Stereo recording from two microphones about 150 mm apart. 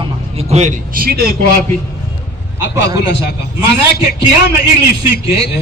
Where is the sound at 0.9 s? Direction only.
80° right.